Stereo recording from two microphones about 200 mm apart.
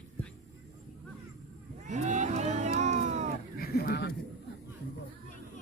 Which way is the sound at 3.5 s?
50° left (ahead or behind).